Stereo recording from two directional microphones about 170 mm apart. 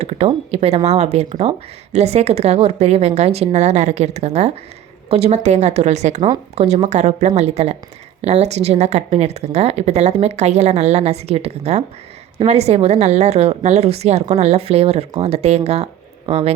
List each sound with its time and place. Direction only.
0.0 s a woman's voice: 40° right (ahead or behind)